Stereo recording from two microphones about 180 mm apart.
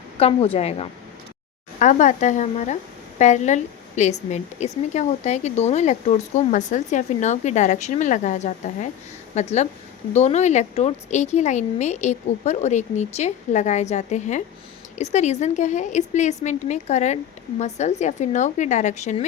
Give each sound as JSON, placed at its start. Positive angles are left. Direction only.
{"t": 0.2, "sound": "a woman's voice", "side_deg": 30}